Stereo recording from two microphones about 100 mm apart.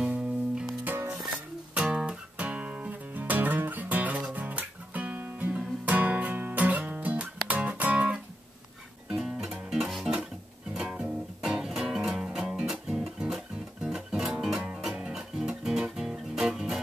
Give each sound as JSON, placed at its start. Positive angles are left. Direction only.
{"t": 0.8, "sound": "music", "side_deg": -20}
{"t": 1.7, "sound": "music", "side_deg": -5}